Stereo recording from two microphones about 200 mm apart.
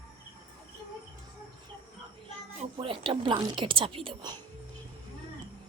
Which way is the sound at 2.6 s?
25° right (ahead or behind).